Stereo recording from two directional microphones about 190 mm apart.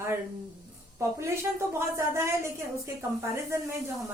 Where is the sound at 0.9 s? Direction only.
15° right (ahead or behind).